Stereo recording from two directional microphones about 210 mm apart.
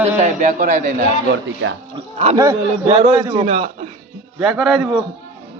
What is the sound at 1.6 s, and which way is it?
Speech, 65° right (ahead or behind).